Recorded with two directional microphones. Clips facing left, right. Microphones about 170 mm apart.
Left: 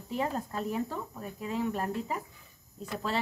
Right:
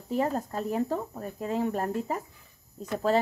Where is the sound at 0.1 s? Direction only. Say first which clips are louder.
Right 4 dB; 40° right (ahead or behind).